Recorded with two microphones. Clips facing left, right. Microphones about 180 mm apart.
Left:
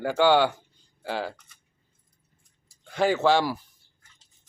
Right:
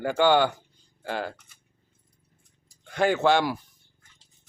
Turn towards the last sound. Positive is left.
turn(degrees=5)  # may be behind; listen again after turning